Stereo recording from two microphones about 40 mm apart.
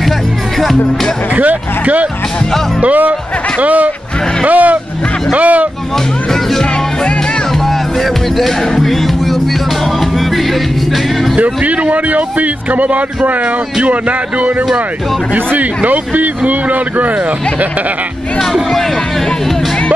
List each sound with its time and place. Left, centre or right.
1.3 s a man's voice: right
6.5 s speech: centre
11.3 s a man's voice: right
18.4 s speech: centre